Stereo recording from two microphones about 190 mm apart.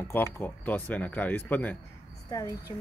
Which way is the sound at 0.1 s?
10° left (ahead or behind).